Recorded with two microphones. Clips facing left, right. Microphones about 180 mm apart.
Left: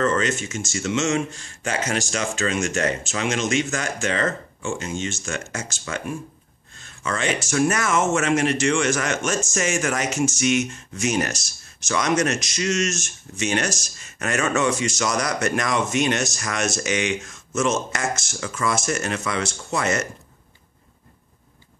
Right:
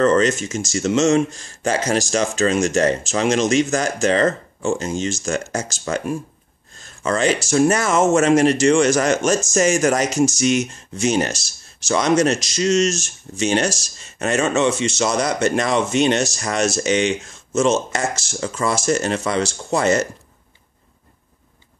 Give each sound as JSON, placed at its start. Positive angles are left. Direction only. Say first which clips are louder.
{"t": 0.0, "sound": "speech", "louder": "right 6 dB", "side_deg": -40}